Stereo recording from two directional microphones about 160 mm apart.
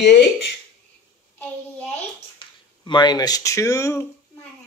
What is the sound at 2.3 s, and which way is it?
Speech, 25° left (ahead or behind).